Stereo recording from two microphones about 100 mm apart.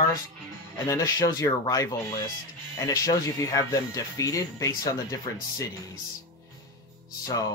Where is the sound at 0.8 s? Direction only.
30° left (ahead or behind).